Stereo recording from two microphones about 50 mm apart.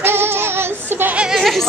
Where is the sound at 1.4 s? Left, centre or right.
Centre.